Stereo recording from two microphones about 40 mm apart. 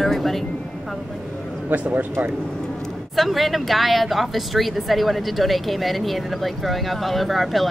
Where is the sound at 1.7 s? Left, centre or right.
Right.